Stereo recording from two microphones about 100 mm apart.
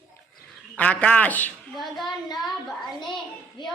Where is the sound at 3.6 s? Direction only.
50° left (ahead or behind).